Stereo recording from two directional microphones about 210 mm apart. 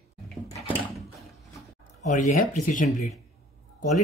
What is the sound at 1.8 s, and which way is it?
Speech, 35° left (ahead or behind).